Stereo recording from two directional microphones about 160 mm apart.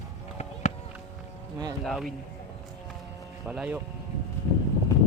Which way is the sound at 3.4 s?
5° right (ahead or behind).